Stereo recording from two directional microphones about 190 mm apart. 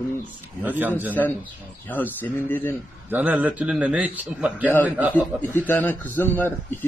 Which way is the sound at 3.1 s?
10° right (ahead or behind).